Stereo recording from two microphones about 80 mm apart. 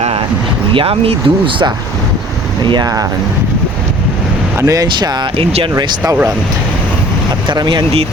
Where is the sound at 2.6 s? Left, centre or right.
Right.